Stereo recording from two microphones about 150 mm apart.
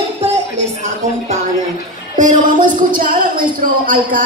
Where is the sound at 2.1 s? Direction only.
60° right (ahead or behind).